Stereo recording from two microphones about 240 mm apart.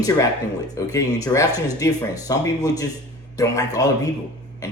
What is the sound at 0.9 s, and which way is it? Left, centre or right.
Speech, centre.